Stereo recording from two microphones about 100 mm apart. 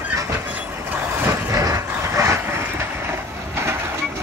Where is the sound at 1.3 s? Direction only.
30° right (ahead or behind).